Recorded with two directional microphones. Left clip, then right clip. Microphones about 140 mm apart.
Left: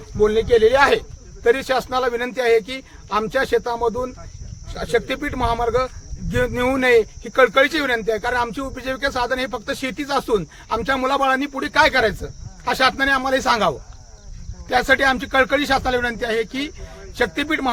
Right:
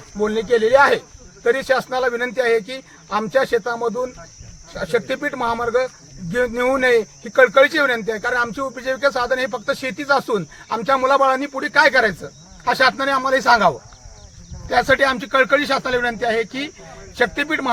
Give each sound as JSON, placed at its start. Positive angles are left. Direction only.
{"t": 0.2, "sound": "a man's voice", "side_deg": 40}
{"t": 3.8, "sound": "speech", "side_deg": 5}
{"t": 4.8, "sound": "a man's voice", "side_deg": 45}
{"t": 14.7, "sound": "a man's voice", "side_deg": 45}